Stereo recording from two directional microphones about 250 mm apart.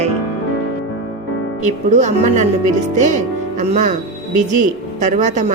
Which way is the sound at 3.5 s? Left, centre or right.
Right.